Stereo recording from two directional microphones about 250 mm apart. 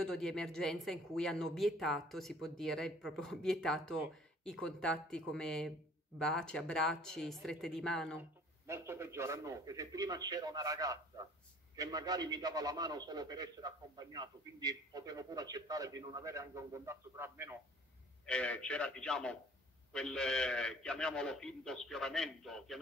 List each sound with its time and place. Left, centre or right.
0.0 s speech: centre
8.2 s a man's voice: centre
18.2 s speech: centre